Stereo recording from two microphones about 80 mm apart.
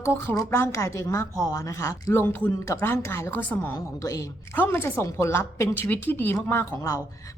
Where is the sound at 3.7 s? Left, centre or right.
Left.